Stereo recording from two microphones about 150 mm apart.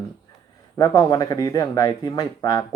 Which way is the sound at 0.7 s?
25° left (ahead or behind).